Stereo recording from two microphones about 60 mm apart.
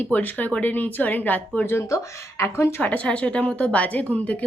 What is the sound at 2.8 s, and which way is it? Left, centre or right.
Speech, left.